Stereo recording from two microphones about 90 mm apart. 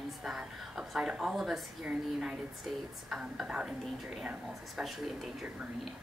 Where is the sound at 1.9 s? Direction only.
10° right (ahead or behind).